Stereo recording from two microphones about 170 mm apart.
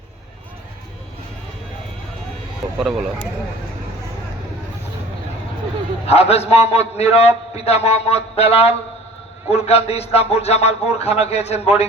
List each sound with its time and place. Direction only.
2.7 s speech: centre (ahead or behind)
6.1 s a man's voice: 35° left (ahead or behind)